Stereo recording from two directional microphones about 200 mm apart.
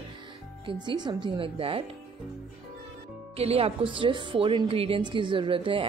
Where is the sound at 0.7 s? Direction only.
20° right (ahead or behind).